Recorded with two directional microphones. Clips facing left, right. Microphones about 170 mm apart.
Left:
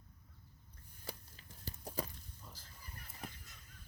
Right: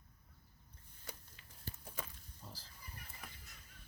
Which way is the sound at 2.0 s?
35° left (ahead or behind).